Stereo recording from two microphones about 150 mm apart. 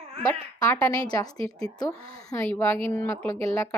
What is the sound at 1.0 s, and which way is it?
A woman's voice, 25° left (ahead or behind).